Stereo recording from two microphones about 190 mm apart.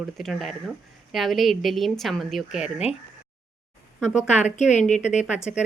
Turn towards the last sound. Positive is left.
turn(degrees=-5)  # may be behind; listen again after turning